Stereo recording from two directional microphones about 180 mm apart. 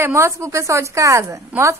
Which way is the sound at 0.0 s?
15° right (ahead or behind).